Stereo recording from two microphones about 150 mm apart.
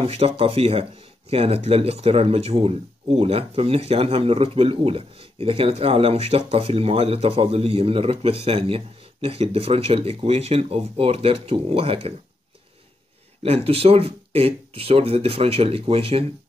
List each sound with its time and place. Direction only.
0.0 s speech: 40° right (ahead or behind)
13.4 s speech: 40° right (ahead or behind)